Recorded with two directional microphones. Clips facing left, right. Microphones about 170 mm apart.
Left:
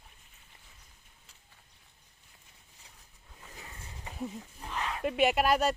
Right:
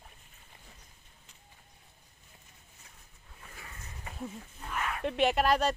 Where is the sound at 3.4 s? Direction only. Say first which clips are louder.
Left 1 dB; 20° left (ahead or behind).